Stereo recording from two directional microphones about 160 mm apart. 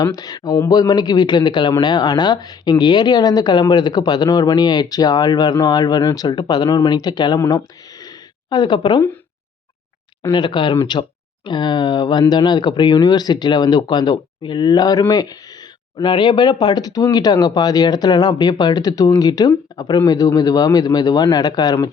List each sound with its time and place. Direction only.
0.0 s speech: 25° left (ahead or behind)
8.0 s a sound: 25° left (ahead or behind)
10.3 s speech: 30° left (ahead or behind)